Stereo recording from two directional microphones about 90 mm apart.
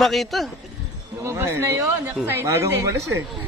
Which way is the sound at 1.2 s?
30° right (ahead or behind).